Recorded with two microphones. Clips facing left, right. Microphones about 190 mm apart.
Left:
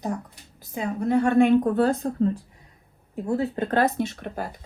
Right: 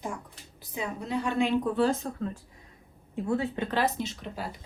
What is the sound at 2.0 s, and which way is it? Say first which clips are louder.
Speech: left 10 dB; 35° left (ahead or behind).